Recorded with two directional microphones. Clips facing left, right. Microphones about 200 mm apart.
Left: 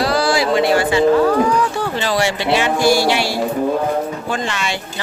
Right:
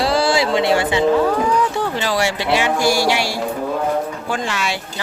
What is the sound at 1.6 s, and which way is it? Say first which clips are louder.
Speech: even; 20° right (ahead or behind).